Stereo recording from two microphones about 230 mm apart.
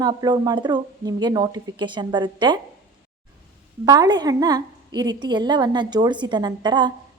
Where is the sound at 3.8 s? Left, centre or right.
Centre.